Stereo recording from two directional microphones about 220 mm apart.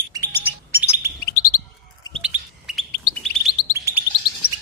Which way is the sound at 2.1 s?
Centre (ahead or behind).